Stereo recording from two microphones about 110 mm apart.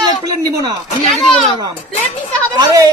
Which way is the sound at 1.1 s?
Centre (ahead or behind).